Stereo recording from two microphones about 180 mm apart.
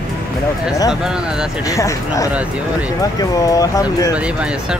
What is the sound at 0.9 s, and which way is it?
Speech, 5° right (ahead or behind).